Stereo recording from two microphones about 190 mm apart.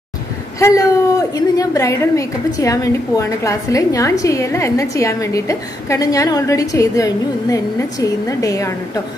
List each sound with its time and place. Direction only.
0.6 s a woman's voice: 15° left (ahead or behind)